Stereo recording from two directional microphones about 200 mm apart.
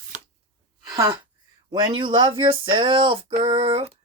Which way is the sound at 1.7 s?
25° right (ahead or behind).